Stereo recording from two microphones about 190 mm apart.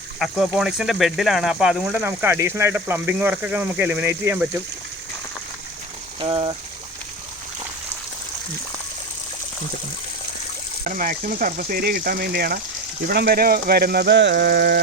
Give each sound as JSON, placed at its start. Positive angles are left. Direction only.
{"t": 0.2, "sound": "speech", "side_deg": 0}
{"t": 6.1, "sound": "speech", "side_deg": -25}
{"t": 10.8, "sound": "speech", "side_deg": -45}